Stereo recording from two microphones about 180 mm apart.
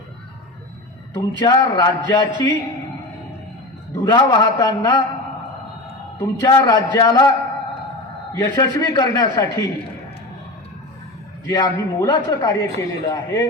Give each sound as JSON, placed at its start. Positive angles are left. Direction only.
{"t": 1.1, "sound": "a man's voice", "side_deg": 15}
{"t": 4.0, "sound": "a man's voice", "side_deg": 20}
{"t": 6.1, "sound": "a man's voice", "side_deg": 20}
{"t": 8.4, "sound": "a man's voice", "side_deg": 15}
{"t": 11.4, "sound": "a man's voice", "side_deg": 20}